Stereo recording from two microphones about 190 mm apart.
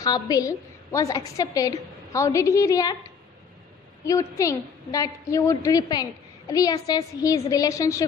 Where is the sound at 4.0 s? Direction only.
15° left (ahead or behind).